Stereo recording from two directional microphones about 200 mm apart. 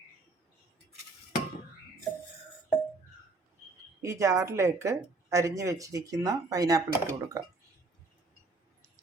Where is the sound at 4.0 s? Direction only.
15° right (ahead or behind).